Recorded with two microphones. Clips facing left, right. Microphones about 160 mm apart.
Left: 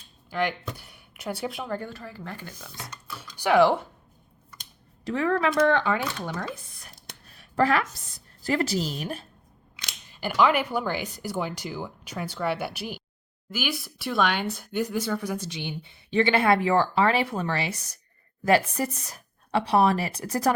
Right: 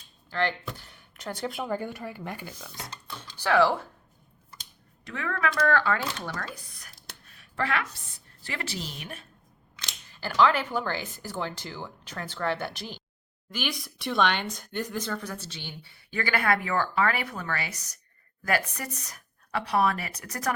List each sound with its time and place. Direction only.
0.3 s speech: 15° left (ahead or behind)
3.3 s speech: 15° left (ahead or behind)
5.0 s a woman's voice: 35° left (ahead or behind)
5.5 s speech: 20° left (ahead or behind)
7.3 s a woman's voice: 35° left (ahead or behind)
9.7 s speech: 15° left (ahead or behind)